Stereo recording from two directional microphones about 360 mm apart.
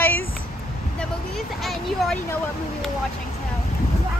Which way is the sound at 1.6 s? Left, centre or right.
Centre.